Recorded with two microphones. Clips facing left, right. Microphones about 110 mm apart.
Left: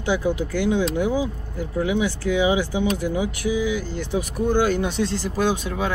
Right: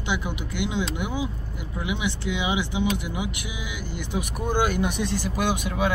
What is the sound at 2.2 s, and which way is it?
Speech, 20° right (ahead or behind).